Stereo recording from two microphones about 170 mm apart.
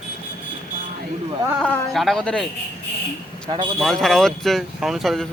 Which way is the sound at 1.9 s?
Centre (ahead or behind).